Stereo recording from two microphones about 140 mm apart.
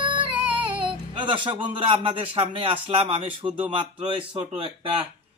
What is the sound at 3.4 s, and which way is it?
Child singing, 10° right (ahead or behind).